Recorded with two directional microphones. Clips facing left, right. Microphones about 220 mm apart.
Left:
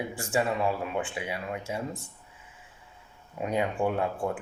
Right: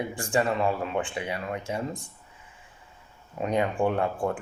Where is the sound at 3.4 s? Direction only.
5° left (ahead or behind).